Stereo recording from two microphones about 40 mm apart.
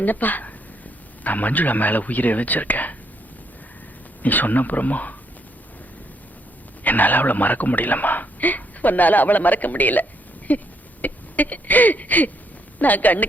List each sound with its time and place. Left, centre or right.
0.0 s a man's voice: left
4.2 s a man's voice: left
6.8 s a man's voice: left
11.0 s a sound: left
12.8 s a man's voice: left